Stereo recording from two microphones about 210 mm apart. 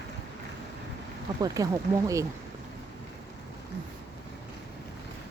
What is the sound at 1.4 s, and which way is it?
Speech, 15° right (ahead or behind).